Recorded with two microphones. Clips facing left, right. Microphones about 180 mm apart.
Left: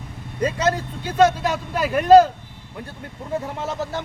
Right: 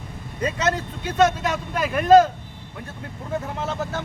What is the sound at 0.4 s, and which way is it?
Speech, 35° left (ahead or behind).